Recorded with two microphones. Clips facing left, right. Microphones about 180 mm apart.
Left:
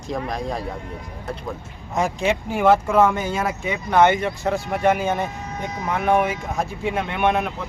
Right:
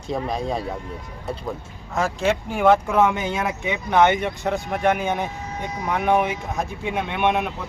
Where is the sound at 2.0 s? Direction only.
15° left (ahead or behind).